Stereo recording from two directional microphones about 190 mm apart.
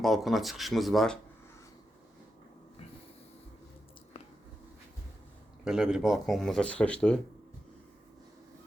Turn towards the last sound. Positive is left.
turn(degrees=5)  # may be behind; listen again after turning